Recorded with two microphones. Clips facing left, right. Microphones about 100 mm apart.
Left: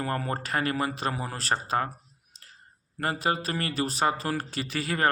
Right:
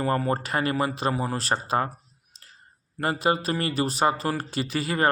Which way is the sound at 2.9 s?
5° right (ahead or behind).